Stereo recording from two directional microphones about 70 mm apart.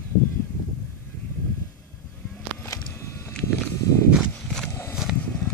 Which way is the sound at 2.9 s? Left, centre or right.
Left.